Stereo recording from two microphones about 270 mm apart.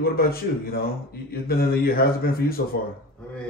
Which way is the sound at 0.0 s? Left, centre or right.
Left.